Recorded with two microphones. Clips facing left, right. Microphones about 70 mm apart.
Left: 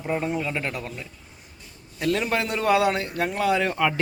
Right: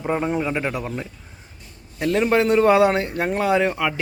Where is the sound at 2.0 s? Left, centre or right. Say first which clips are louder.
Right 6 dB; right.